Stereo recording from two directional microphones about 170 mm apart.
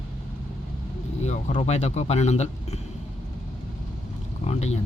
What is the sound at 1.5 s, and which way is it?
A man's voice, 40° left (ahead or behind).